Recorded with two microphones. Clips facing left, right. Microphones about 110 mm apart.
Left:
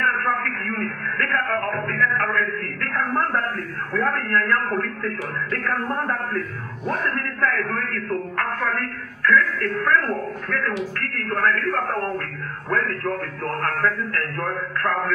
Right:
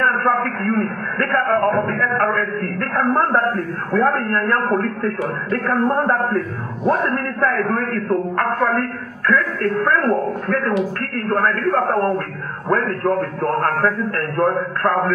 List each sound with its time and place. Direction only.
0.0 s a man's voice: 35° right (ahead or behind)